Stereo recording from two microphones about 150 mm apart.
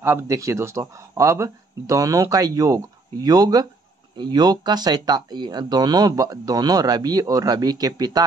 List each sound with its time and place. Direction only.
0.0 s speech: 15° right (ahead or behind)